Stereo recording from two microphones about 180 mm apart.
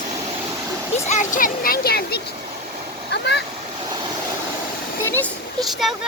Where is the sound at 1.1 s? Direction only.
45° left (ahead or behind).